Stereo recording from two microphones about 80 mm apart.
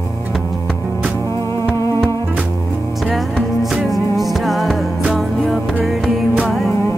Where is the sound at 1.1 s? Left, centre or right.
Left.